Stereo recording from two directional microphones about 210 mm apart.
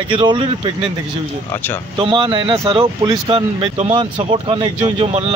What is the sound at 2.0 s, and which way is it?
Speech, 25° right (ahead or behind).